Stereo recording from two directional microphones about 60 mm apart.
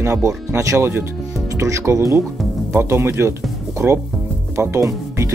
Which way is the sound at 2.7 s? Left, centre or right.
Right.